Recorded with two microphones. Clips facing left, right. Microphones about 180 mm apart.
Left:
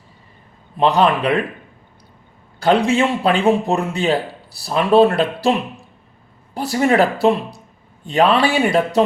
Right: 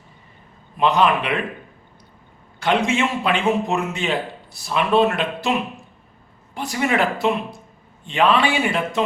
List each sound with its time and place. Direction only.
0.8 s speech: 35° left (ahead or behind)
2.6 s speech: 35° left (ahead or behind)